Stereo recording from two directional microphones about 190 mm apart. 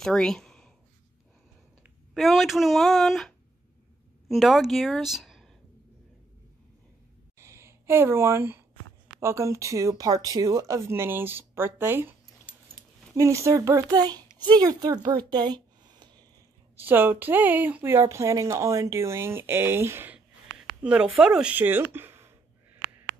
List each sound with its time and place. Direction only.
0.0 s a sound: 5° left (ahead or behind)
1.8 s a woman's voice: centre (ahead or behind)
7.3 s a sound: 15° right (ahead or behind)
9.2 s speech: 15° right (ahead or behind)
13.1 s speech: 15° right (ahead or behind)
16.7 s speech: 10° right (ahead or behind)